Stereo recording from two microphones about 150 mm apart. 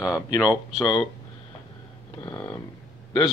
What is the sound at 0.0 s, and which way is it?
Speech, 25° left (ahead or behind).